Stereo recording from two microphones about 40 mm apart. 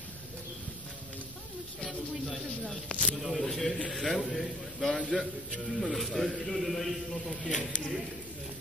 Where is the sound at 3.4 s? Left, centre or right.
Centre.